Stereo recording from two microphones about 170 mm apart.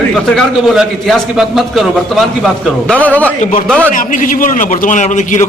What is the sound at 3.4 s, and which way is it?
A man's voice, 50° left (ahead or behind).